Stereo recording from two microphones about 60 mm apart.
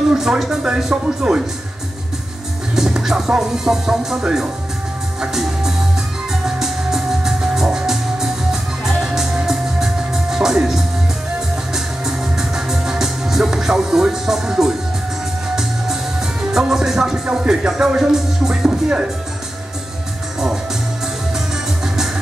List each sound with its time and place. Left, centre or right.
0.1 s music: centre
2.7 s music: centre
21.8 s music: centre